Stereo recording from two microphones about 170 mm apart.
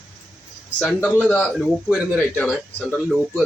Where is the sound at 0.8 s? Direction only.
5° left (ahead or behind).